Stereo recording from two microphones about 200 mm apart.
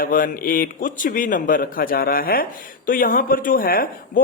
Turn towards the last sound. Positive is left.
turn(degrees=45)  # may be behind; listen again after turning